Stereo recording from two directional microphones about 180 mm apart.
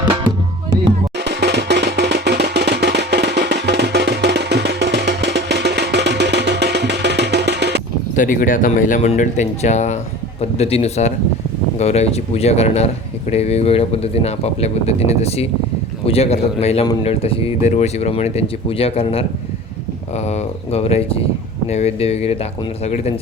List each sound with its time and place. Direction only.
1.2 s music: 70° right (ahead or behind)
8.1 s speech: 45° left (ahead or behind)